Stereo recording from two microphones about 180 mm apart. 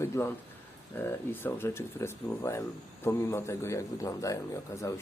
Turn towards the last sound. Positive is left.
turn(degrees=15)  # may be behind; listen again after turning